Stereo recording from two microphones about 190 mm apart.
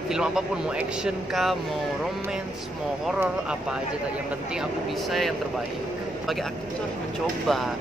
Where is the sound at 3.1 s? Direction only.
5° right (ahead or behind).